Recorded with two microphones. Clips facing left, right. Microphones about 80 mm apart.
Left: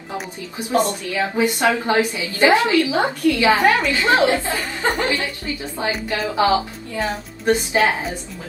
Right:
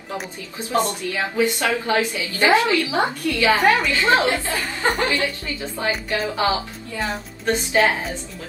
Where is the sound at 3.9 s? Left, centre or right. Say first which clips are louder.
Left 2 dB; left.